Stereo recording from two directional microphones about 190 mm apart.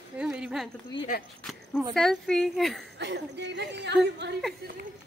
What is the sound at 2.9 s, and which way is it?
Speech, 65° right (ahead or behind).